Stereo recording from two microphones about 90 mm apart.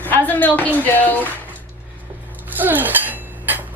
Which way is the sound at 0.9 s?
20° left (ahead or behind).